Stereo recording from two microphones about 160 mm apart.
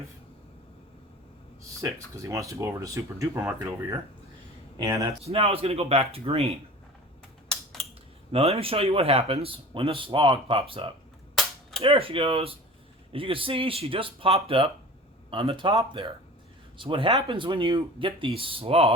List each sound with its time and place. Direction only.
1.8 s speech: 20° right (ahead or behind)
5.2 s speech: 35° right (ahead or behind)
7.4 s typing: centre (ahead or behind)
8.3 s speech: 40° right (ahead or behind)